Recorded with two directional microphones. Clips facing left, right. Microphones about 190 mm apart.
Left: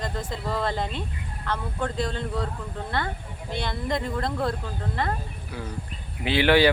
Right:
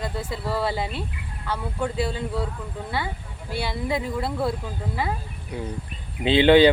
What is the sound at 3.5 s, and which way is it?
Speech, 10° right (ahead or behind).